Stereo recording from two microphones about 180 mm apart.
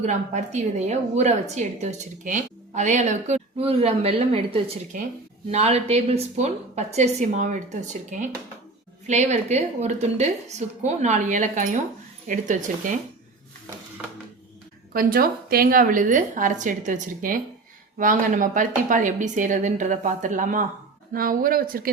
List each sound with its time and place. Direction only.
0.0 s a woman's voice: 40° right (ahead or behind)
14.9 s speech: 55° right (ahead or behind)